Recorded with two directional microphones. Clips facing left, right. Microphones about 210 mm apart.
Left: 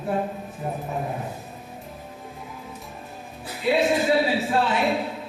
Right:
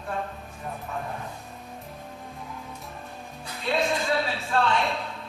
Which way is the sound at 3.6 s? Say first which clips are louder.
Left 6 dB; 5° left (ahead or behind).